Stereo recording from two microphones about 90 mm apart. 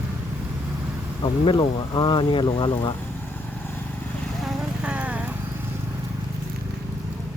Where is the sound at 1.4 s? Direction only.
65° left (ahead or behind).